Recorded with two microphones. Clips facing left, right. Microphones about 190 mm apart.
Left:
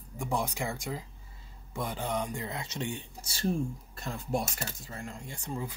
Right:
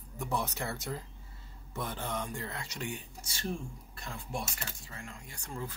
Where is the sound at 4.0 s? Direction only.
40° left (ahead or behind).